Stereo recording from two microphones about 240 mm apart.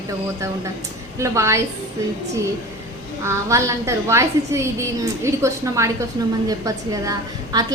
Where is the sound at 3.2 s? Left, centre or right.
Centre.